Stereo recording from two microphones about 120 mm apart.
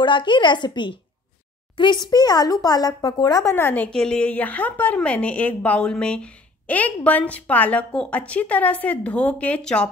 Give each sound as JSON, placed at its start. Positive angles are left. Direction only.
{"t": 0.0, "sound": "speech", "side_deg": 40}
{"t": 3.5, "sound": "a woman's voice", "side_deg": 15}